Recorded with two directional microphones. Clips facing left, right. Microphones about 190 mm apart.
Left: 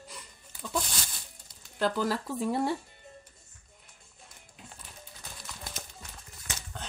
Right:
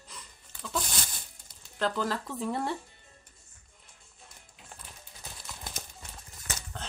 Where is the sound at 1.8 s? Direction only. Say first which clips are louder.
Left 2 dB; 10° left (ahead or behind).